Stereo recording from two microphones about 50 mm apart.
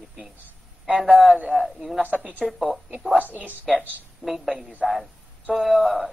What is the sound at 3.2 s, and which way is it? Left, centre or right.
Speech, right.